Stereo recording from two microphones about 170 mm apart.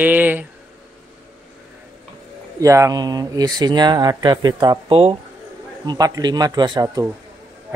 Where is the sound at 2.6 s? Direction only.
20° right (ahead or behind).